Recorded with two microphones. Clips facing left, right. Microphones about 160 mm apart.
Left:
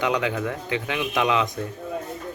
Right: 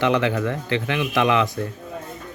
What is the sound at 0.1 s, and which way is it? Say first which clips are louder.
Speech: right 4 dB; 10° left (ahead or behind).